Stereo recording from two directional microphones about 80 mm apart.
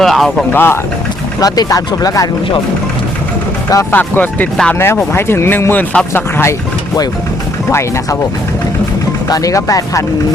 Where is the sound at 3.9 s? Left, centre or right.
Left.